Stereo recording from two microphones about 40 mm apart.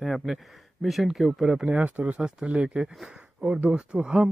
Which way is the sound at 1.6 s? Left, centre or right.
Right.